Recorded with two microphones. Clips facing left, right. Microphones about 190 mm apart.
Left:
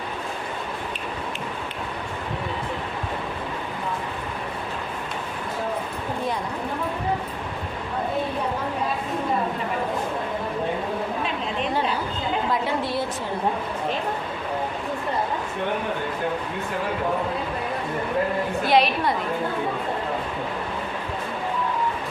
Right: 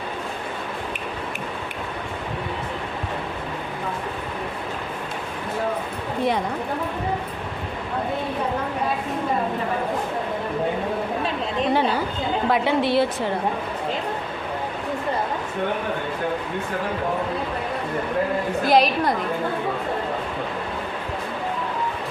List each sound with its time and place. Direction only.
12.5 s a woman's voice: 70° right (ahead or behind)
18.6 s a woman's voice: 40° right (ahead or behind)